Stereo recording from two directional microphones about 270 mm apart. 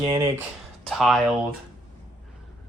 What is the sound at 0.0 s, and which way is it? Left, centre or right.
Speech, centre.